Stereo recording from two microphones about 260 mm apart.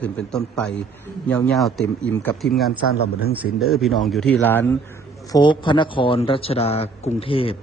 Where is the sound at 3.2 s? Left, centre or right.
Left.